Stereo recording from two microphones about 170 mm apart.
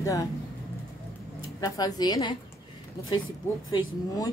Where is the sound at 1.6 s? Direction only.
20° left (ahead or behind).